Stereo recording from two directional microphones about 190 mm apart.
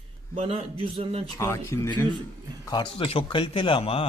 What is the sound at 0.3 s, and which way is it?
Speech, 30° right (ahead or behind).